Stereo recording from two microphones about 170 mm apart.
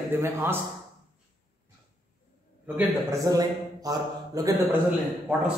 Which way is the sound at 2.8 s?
20° right (ahead or behind).